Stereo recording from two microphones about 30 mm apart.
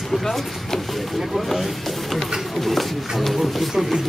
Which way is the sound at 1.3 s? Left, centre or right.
Centre.